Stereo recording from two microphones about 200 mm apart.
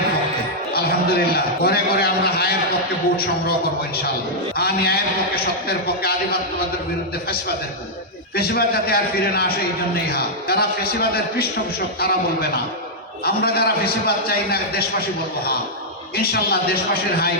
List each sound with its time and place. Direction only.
0.7 s a man's voice: 50° left (ahead or behind)
4.5 s a man's voice: 50° left (ahead or behind)
8.4 s a man's voice: 50° left (ahead or behind)
16.1 s a man's voice: 50° left (ahead or behind)